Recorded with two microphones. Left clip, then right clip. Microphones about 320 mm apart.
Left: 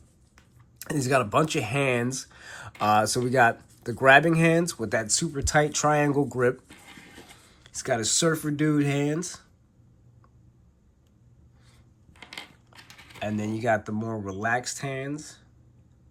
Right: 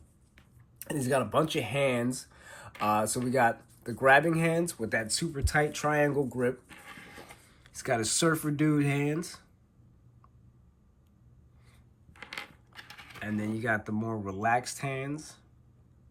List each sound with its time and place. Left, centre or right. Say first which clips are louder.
0.9 s speech: left 5 dB; centre
7.6 s speech: left 3 dB; centre
12.2 s speech: even; centre